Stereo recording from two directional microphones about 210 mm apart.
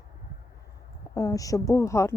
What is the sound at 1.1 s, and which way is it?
Speech, 15° left (ahead or behind).